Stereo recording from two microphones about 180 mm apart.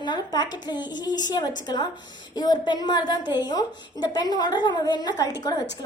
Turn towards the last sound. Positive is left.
turn(degrees=20)  # may be behind; listen again after turning